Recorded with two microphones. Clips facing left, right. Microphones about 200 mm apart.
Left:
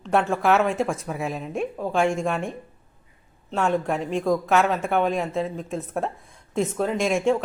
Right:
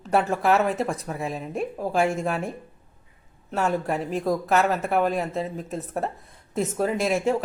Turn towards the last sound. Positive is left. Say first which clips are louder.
# left 1 dB
turn(degrees=-5)  # may be behind; listen again after turning